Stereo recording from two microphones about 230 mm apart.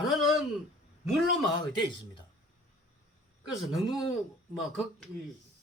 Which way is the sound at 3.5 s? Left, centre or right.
Centre.